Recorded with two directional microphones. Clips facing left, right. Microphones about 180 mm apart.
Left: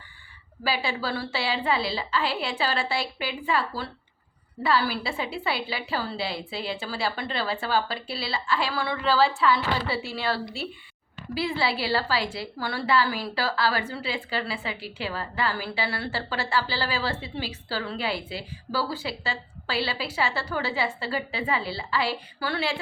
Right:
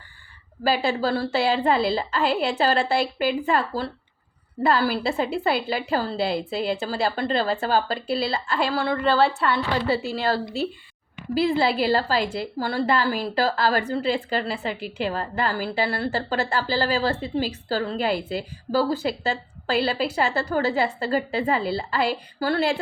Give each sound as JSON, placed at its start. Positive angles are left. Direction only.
{"t": 0.6, "sound": "a woman's voice", "side_deg": -45}